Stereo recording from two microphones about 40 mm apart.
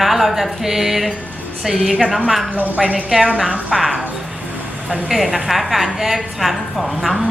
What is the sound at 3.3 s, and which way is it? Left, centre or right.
Speech, right.